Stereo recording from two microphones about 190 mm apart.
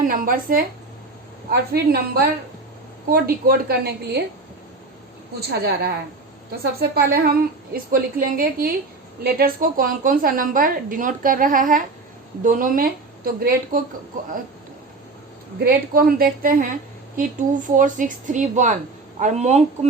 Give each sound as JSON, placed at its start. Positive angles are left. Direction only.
{"t": 0.0, "sound": "a woman's voice", "side_deg": -50}
{"t": 5.4, "sound": "a woman's voice", "side_deg": -55}
{"t": 15.5, "sound": "a woman's voice", "side_deg": -55}